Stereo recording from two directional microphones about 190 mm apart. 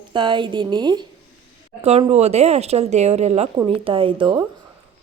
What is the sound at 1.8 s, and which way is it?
A woman's voice, 35° right (ahead or behind).